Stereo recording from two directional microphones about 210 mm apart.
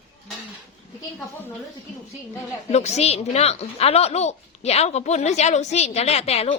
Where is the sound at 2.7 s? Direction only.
30° left (ahead or behind).